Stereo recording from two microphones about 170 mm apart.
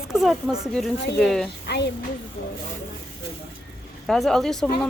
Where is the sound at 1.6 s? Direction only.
80° left.